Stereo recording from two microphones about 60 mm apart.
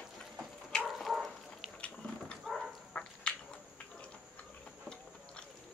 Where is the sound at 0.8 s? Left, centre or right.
Centre.